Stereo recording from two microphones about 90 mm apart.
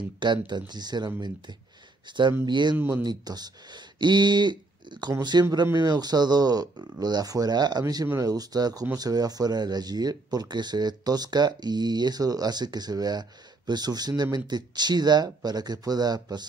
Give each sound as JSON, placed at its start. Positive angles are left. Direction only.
{"t": 0.2, "sound": "speech", "side_deg": -55}